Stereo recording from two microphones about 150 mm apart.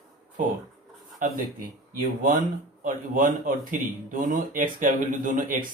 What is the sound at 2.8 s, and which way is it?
Speech, 65° right (ahead or behind).